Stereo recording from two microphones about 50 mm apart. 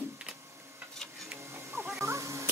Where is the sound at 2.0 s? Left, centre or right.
Right.